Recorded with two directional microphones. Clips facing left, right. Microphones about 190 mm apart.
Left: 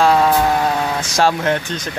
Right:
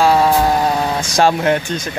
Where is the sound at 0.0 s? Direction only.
5° right (ahead or behind).